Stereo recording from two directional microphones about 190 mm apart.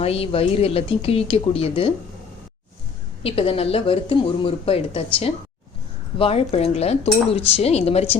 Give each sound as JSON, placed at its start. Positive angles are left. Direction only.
{"t": 0.0, "sound": "speech", "side_deg": 30}
{"t": 3.2, "sound": "speech", "side_deg": 30}